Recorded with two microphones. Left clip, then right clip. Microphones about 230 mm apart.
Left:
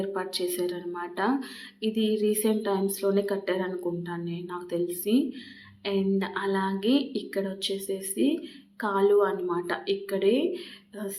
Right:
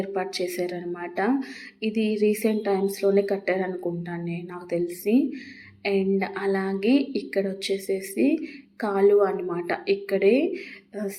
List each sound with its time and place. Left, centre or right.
0.0 s a woman's voice: centre